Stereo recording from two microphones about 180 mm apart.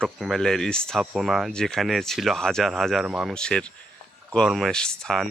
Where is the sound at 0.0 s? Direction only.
Centre (ahead or behind).